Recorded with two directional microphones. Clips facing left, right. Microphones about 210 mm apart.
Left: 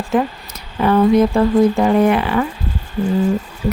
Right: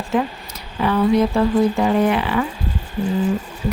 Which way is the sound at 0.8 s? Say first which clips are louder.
Left 4 dB; 45° left (ahead or behind).